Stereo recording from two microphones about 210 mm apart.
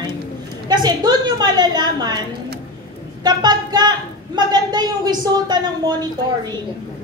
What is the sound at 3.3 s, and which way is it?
A woman's voice, 20° right (ahead or behind).